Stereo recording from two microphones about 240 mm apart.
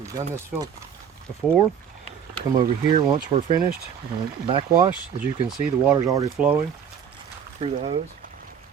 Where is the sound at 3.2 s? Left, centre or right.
Right.